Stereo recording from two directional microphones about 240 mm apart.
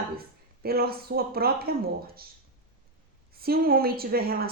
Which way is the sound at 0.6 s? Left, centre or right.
Right.